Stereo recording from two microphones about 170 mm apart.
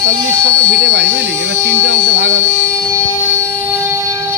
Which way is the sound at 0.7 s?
80° right.